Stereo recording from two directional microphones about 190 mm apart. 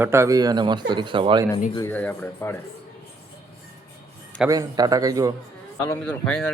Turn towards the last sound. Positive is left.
turn(degrees=5)  # may be behind; listen again after turning